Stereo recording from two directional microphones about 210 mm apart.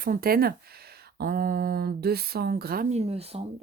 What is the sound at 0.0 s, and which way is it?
Speech, 45° right (ahead or behind).